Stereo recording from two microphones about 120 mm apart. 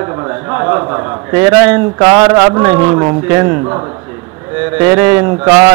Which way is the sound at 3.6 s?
30° right (ahead or behind).